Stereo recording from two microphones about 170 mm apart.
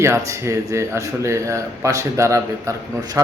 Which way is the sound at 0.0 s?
15° right (ahead or behind).